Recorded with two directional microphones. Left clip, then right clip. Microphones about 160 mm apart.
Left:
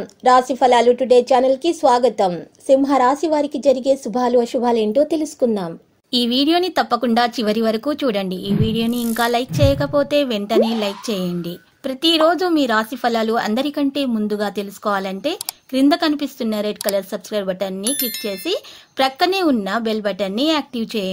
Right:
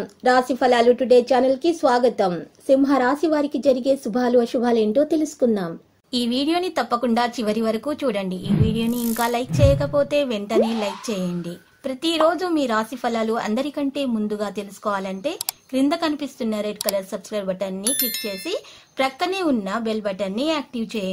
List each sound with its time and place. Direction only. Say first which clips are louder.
0.2 s a woman's voice: left 4 dB; 20° left (ahead or behind)
17.8 s speech: left 2 dB; centre (ahead or behind)
18.2 s a woman's voice: left 4 dB; 30° left (ahead or behind)